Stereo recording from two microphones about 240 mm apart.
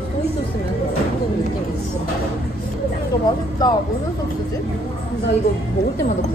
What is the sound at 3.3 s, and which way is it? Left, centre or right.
Speech, centre.